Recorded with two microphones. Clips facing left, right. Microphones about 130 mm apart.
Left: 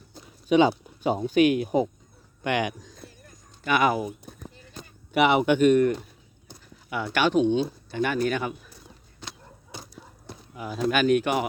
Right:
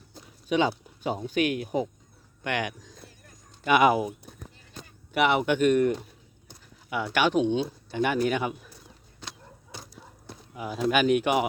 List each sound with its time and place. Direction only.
0.1 s speech: 15° left (ahead or behind)
2.4 s speech: 10° left (ahead or behind)
3.6 s speech: 20° right (ahead or behind)
4.3 s a sound: 20° left (ahead or behind)
4.8 s speech: 5° left (ahead or behind)
6.9 s speech: 10° right (ahead or behind)
9.7 s a sound: 10° left (ahead or behind)
10.5 s speech: 10° right (ahead or behind)